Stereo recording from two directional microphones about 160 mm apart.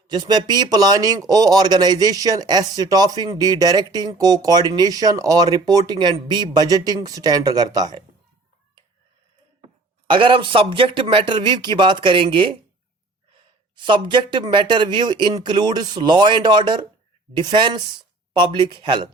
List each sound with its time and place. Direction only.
0.1 s speech: 25° right (ahead or behind)
10.1 s speech: 35° right (ahead or behind)